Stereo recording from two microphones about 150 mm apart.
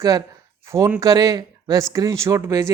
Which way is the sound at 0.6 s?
20° right (ahead or behind).